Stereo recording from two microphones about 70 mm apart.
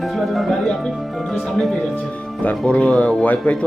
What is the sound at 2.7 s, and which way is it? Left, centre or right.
Speech, centre.